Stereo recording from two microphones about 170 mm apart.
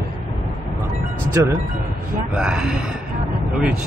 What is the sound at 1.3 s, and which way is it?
Speech, 15° right (ahead or behind).